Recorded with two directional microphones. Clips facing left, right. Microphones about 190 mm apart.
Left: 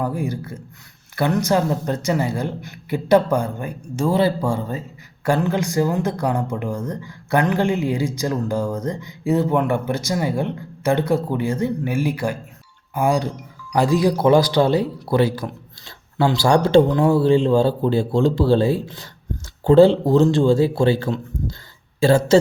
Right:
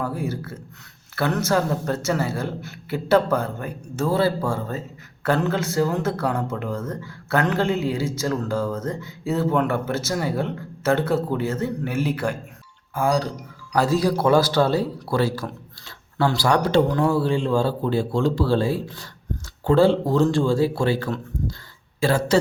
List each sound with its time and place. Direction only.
0.0 s speech: 15° left (ahead or behind)